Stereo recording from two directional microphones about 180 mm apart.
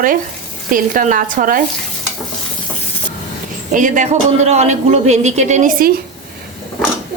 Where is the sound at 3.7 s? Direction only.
45° right (ahead or behind).